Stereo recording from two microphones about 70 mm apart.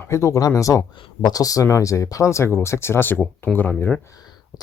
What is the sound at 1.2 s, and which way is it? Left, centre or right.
Speech, left.